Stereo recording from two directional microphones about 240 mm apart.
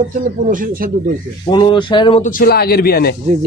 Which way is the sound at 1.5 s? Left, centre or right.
Centre.